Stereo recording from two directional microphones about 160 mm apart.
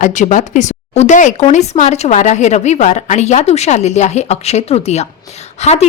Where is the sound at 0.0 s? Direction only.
50° left (ahead or behind).